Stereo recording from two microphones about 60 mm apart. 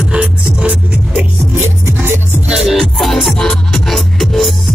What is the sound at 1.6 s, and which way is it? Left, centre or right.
Music, right.